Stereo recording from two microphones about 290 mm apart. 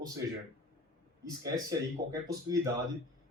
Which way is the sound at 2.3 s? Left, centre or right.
Centre.